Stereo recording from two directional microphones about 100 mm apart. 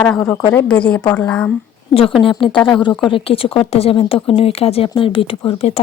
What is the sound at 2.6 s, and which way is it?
A woman's voice, 50° left (ahead or behind).